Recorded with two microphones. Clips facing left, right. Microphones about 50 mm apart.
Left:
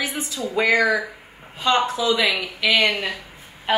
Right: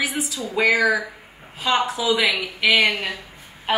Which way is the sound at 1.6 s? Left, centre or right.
Centre.